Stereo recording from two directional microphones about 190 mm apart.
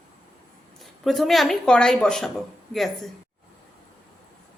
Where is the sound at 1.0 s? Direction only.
Centre (ahead or behind).